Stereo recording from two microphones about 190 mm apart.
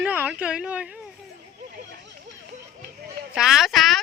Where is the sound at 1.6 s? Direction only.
65° right (ahead or behind).